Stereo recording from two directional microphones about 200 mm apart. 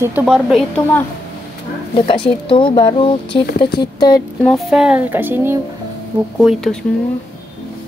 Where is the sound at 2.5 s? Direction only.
25° left (ahead or behind).